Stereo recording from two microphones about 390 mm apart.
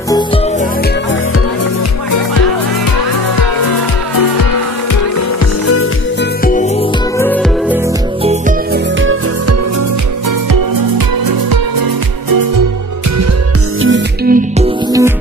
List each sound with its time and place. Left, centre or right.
6.4 s music: centre
7.2 s music: centre
8.2 s music: centre
9.0 s music: right
13.7 s music: right
14.9 s music: centre